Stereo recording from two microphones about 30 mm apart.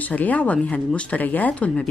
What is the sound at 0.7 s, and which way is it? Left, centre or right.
Speech, left.